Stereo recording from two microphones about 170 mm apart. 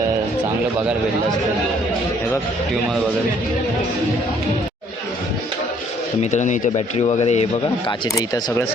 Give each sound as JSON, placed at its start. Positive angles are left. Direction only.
{"t": 6.3, "sound": "speech", "side_deg": 45}
{"t": 7.9, "sound": "speech", "side_deg": 25}